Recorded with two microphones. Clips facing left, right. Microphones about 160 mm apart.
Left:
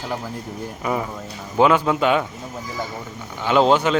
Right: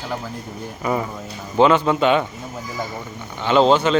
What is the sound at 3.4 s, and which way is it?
Speech, 10° left (ahead or behind).